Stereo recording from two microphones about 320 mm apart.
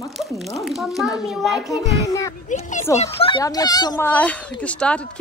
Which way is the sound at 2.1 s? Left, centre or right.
Centre.